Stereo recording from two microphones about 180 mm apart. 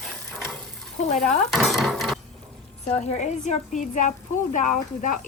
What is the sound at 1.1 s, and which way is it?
Speech, 45° left (ahead or behind).